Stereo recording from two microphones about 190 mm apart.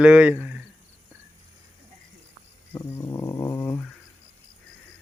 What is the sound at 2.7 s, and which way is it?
Dog, 15° left (ahead or behind).